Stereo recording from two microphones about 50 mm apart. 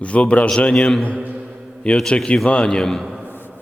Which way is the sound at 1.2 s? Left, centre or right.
Right.